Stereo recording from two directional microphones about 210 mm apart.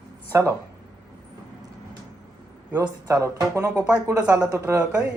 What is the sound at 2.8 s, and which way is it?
Speech, 15° right (ahead or behind).